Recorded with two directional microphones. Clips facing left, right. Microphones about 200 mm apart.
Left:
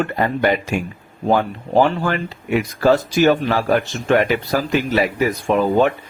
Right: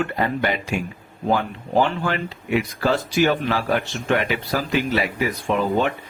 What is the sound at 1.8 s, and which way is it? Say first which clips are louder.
Speech: left 4 dB; 45° left (ahead or behind).